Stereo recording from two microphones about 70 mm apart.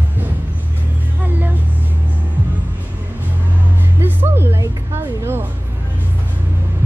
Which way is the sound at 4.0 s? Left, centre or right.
Right.